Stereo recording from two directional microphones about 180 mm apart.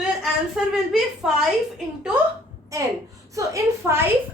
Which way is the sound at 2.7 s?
20° right (ahead or behind).